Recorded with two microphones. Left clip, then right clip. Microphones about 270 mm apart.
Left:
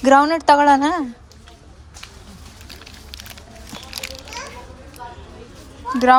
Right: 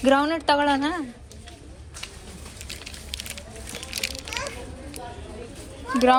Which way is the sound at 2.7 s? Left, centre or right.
Centre.